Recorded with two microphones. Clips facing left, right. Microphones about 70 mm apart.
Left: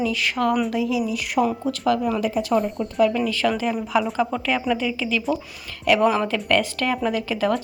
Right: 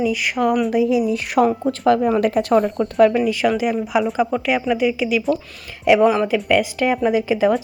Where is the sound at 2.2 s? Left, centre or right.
Right.